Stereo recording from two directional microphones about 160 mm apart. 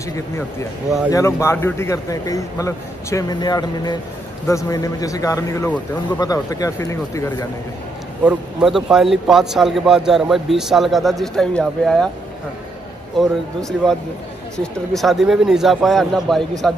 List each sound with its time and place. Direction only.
0.1 s speech: 20° left (ahead or behind)
8.3 s a man's voice: 5° right (ahead or behind)
13.2 s a man's voice: centre (ahead or behind)